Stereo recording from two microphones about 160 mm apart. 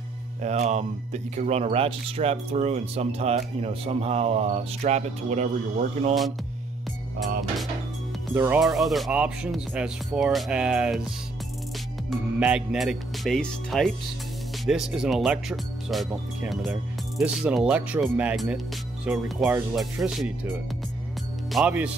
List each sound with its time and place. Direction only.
0.4 s speech: 45° right (ahead or behind)
8.5 s speech: centre (ahead or behind)
12.4 s speech: 5° right (ahead or behind)
21.5 s speech: 5° right (ahead or behind)